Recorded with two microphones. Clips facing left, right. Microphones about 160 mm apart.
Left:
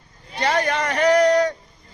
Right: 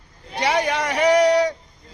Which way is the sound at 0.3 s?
10° right (ahead or behind).